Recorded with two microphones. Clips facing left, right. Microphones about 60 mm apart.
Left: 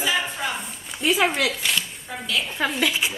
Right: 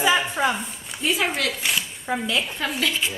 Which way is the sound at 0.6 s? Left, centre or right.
Centre.